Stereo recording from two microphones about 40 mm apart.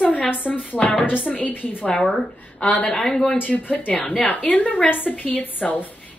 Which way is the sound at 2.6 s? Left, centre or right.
Left.